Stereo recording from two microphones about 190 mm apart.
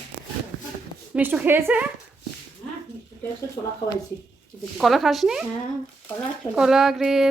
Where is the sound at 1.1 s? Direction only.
10° right (ahead or behind).